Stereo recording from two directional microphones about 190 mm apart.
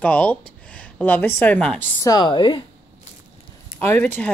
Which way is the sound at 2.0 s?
20° left (ahead or behind).